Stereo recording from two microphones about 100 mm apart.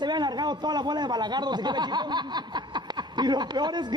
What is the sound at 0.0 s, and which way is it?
A man's voice, 45° right (ahead or behind).